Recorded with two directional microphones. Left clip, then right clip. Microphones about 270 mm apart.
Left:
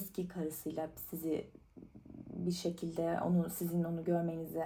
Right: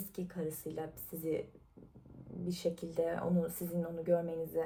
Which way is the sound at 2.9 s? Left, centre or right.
Left.